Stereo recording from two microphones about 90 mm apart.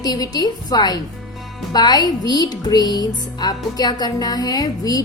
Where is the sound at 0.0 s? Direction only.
45° left (ahead or behind).